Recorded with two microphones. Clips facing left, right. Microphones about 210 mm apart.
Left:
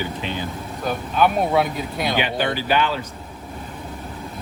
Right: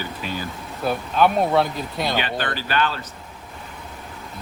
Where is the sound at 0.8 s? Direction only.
Centre (ahead or behind).